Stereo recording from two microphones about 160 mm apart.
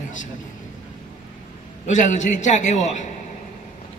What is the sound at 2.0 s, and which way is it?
A man's voice, 50° left (ahead or behind).